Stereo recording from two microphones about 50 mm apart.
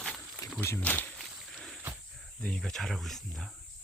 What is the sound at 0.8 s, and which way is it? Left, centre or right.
Speech, left.